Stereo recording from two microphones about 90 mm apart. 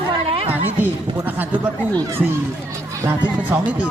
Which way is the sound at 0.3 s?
90° right.